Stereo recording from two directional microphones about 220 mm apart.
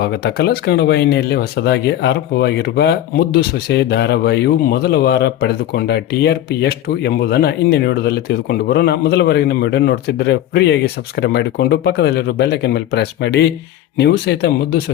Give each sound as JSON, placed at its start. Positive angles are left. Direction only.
{"t": 0.0, "sound": "speech", "side_deg": 50}